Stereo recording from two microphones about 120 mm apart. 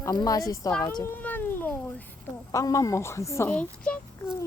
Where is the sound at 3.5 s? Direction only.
10° left (ahead or behind).